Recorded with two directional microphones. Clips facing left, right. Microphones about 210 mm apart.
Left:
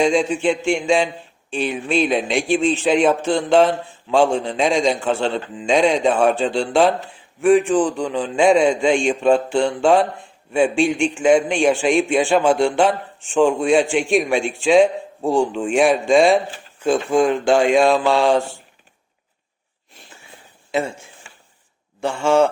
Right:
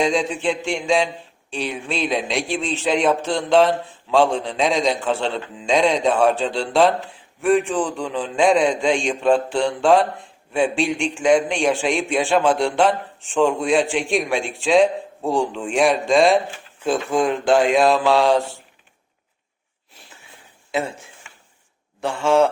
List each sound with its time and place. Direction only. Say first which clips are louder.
0.0 s a man's voice: left 3 dB; centre (ahead or behind)
20.7 s a man's voice: left 2 dB; centre (ahead or behind)
21.2 s a sound: left 1 dB; 35° left (ahead or behind)
22.0 s a man's voice: left 1 dB; centre (ahead or behind)